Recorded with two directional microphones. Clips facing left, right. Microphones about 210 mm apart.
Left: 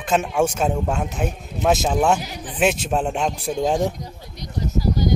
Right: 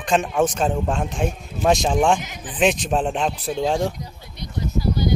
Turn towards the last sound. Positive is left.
turn(degrees=40)  # may be behind; listen again after turning